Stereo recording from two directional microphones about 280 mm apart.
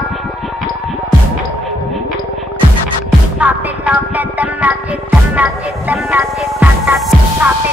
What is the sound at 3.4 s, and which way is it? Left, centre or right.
Music, centre.